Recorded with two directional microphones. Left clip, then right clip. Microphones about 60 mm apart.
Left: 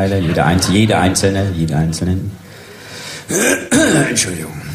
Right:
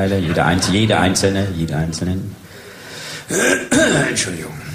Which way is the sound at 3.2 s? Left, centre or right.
Right.